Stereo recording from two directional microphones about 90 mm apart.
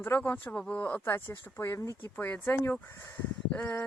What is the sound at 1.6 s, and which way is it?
Speech, 35° left (ahead or behind).